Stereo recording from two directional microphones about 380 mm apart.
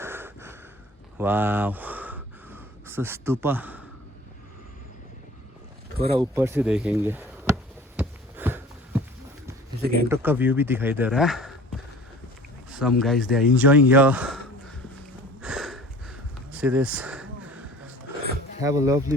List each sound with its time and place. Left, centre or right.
0.0 s snort: centre
1.2 s a sound: centre
6.1 s chop: centre
9.8 s speech: right
10.1 s speech: centre
12.7 s speech: centre
15.4 s a sound: centre
18.6 s speech: centre